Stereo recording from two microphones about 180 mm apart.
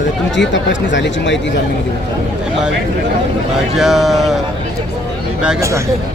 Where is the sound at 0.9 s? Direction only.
85° left.